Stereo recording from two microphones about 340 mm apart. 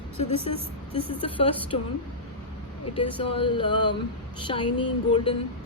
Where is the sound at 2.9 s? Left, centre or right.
Centre.